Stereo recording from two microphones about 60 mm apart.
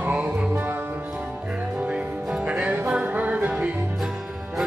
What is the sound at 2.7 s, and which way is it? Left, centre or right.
Music, right.